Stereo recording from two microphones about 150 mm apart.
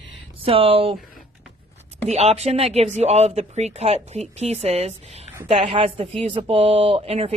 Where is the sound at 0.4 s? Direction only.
40° right (ahead or behind).